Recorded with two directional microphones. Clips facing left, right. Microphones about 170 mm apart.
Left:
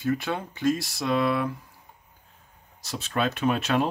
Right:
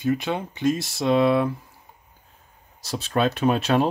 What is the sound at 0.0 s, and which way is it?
Speech, 20° right (ahead or behind).